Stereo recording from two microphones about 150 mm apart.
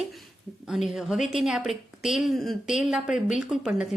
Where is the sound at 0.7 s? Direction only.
Centre (ahead or behind).